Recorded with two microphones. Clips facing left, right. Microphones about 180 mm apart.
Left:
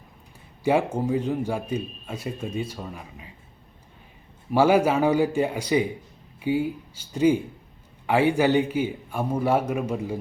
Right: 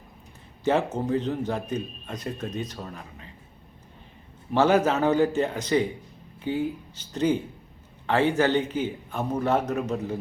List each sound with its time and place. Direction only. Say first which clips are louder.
0.6 s speech: left 2 dB; 10° left (ahead or behind)
4.5 s speech: left 2 dB; 10° left (ahead or behind)